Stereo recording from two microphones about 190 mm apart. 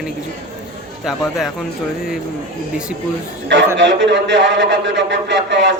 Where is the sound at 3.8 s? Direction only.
70° right (ahead or behind).